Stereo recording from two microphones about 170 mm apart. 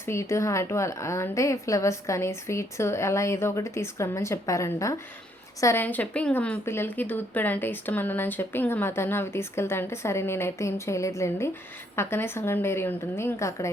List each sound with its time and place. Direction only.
0.0 s speech: 15° left (ahead or behind)